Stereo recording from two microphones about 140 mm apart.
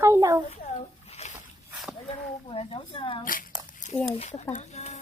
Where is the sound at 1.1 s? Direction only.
50° left (ahead or behind).